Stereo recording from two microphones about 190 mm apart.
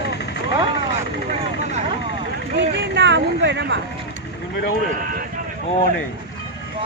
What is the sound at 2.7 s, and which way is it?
Speech, 70° right (ahead or behind).